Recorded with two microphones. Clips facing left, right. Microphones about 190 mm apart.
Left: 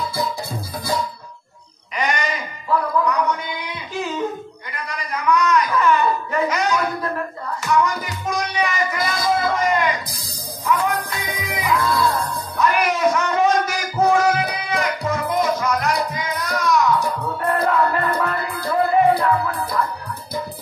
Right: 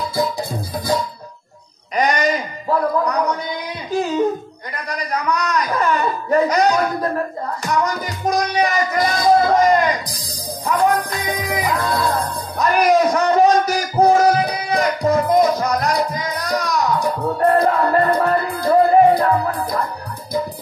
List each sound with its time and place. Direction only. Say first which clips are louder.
0.1 s music: right 4 dB; 15° right (ahead or behind)
2.0 s music: right 6 dB; 40° right (ahead or behind)
4.7 s a sound: right 4 dB; 40° right (ahead or behind)
7.6 s music: left 1 dB; 40° right (ahead or behind)